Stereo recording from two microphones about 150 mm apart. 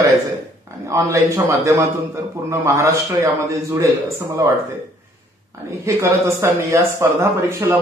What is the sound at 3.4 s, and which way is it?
A man's voice, 20° right (ahead or behind).